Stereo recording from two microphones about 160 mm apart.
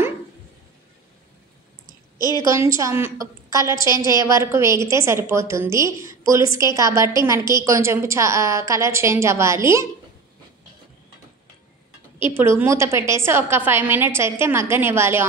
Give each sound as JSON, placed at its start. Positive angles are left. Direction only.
{"t": 2.1, "sound": "a woman's voice", "side_deg": 25}
{"t": 2.4, "sound": "a woman's voice", "side_deg": -20}
{"t": 12.2, "sound": "a woman's voice", "side_deg": -15}